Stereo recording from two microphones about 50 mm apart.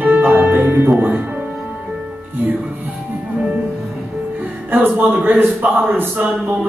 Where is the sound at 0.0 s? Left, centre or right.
Right.